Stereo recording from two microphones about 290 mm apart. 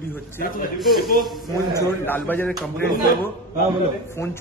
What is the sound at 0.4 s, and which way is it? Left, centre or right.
Speech, left.